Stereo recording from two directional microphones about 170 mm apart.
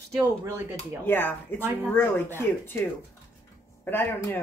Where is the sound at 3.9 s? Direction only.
10° left (ahead or behind).